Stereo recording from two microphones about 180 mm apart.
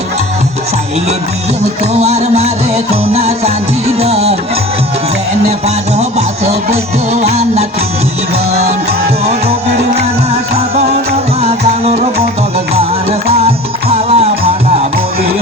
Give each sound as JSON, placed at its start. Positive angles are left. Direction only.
{"t": 1.8, "sound": "music", "side_deg": -35}
{"t": 5.5, "sound": "music", "side_deg": -35}
{"t": 11.3, "sound": "music", "side_deg": -35}
{"t": 13.3, "sound": "music", "side_deg": -35}